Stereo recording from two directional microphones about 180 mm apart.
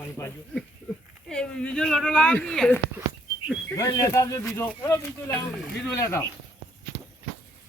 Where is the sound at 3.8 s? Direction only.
20° left (ahead or behind).